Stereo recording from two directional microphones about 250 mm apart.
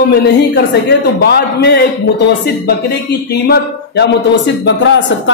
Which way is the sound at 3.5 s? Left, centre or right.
Left.